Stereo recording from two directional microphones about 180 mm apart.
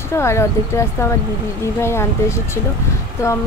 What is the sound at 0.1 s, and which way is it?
Speech, 15° left (ahead or behind).